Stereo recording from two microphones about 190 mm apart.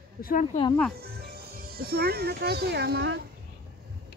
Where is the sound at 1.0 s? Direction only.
55° right (ahead or behind).